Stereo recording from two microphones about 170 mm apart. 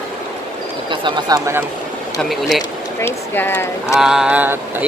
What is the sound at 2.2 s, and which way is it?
Speech, centre (ahead or behind).